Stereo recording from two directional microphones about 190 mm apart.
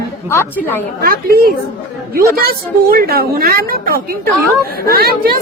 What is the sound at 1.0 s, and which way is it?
A woman's voice, 50° right (ahead or behind).